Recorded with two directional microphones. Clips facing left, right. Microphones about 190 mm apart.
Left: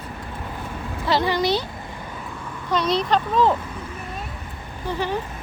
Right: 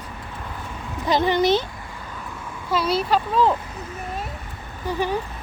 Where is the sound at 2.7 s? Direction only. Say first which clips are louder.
Even; 5° right (ahead or behind).